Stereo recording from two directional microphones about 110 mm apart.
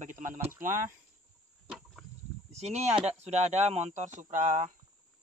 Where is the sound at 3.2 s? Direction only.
90° right.